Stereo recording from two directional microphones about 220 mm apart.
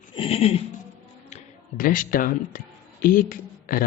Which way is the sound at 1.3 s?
35° left (ahead or behind).